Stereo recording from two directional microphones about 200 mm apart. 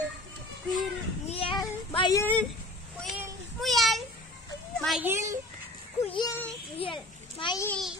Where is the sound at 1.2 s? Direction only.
30° left (ahead or behind).